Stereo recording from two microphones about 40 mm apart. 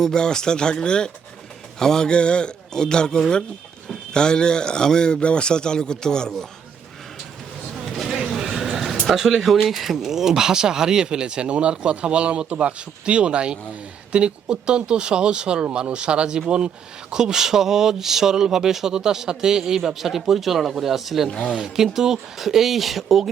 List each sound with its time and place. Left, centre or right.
0.0 s a man's voice: centre
8.3 s a sound: centre
9.1 s speech: centre
21.2 s a man's voice: left
21.5 s speech: centre